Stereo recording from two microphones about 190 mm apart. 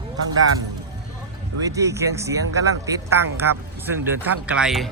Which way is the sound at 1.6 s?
15° right (ahead or behind).